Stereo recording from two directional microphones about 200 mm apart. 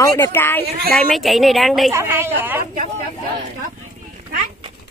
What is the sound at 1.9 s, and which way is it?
Speech, 15° right (ahead or behind).